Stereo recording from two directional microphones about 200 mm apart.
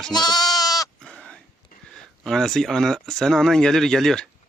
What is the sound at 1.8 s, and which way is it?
Speech, centre (ahead or behind).